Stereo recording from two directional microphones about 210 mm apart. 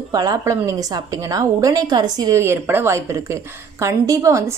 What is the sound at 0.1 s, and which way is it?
A woman's voice, 20° right (ahead or behind).